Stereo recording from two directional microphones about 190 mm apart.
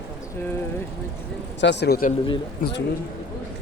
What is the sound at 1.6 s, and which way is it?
Speech, 65° left (ahead or behind).